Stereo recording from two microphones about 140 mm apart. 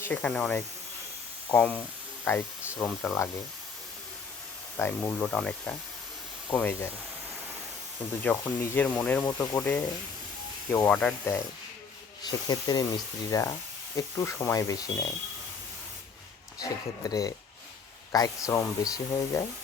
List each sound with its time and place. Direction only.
0.0 s speech: 10° left (ahead or behind)
2.3 s speech: 20° left (ahead or behind)
4.8 s speech: 15° left (ahead or behind)
8.2 s speech: 10° left (ahead or behind)
10.8 s speech: 10° left (ahead or behind)
12.2 s speech: 30° left (ahead or behind)
16.6 s speech: 25° left (ahead or behind)